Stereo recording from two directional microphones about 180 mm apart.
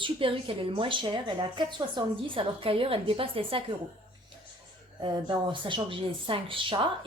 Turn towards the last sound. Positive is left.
turn(degrees=-30)  # may be behind; listen again after turning